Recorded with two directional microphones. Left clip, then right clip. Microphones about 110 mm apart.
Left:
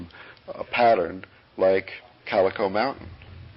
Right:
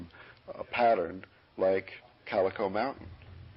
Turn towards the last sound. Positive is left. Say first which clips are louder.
# left 7 dB
turn(degrees=-35)  # may be behind; listen again after turning